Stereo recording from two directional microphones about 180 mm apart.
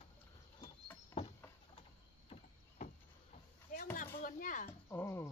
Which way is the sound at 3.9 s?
45° left (ahead or behind).